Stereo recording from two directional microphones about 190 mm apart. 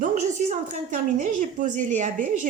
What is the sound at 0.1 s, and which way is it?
A woman's voice, 40° right (ahead or behind).